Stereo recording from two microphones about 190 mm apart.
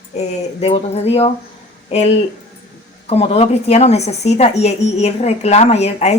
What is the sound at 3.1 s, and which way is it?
A woman's voice, 30° left (ahead or behind).